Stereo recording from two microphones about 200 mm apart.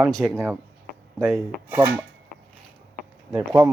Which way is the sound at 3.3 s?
15° right (ahead or behind).